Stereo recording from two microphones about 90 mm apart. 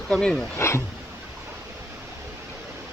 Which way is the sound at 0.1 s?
10° left (ahead or behind).